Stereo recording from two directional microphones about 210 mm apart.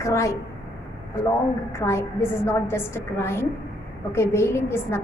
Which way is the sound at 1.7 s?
15° left (ahead or behind).